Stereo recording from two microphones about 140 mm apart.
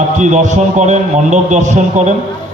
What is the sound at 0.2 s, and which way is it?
A man's voice, 60° right (ahead or behind).